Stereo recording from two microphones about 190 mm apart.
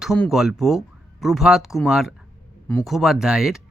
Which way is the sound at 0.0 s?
Centre (ahead or behind).